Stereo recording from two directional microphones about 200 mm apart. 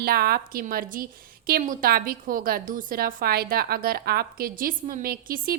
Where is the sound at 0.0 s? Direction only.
50° right (ahead or behind).